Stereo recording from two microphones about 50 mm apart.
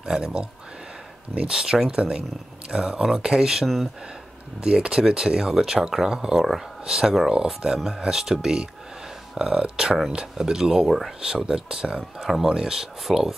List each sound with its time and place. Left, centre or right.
0.0 s speech: centre
3.6 s speech: centre
4.6 s speech: centre